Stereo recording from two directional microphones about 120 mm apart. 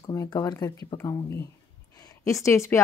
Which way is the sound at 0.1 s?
25° left (ahead or behind).